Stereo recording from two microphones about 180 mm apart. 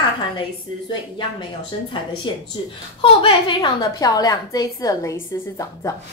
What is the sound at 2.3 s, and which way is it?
A woman's voice, 25° left (ahead or behind).